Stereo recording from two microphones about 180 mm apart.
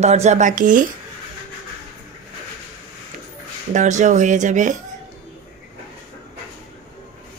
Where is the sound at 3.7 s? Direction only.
45° right (ahead or behind).